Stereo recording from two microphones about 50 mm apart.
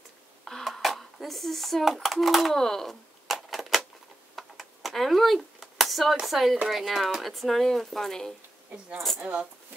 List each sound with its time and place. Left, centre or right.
0.5 s a sound: centre
2.0 s speech: centre
3.3 s typewriter: centre
4.4 s a sound: centre
6.2 s speech: centre
9.2 s speech: right